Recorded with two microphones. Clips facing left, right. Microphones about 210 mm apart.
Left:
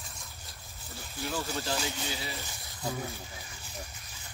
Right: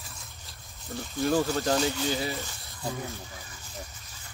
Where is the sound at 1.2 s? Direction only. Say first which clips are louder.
Right 9 dB; 45° right (ahead or behind).